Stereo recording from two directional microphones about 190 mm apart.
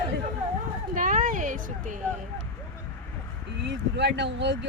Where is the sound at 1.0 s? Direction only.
45° right (ahead or behind).